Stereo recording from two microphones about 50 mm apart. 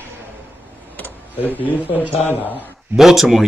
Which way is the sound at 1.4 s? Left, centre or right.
Left.